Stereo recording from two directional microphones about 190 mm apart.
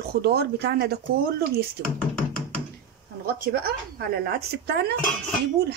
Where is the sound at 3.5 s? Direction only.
55° right (ahead or behind).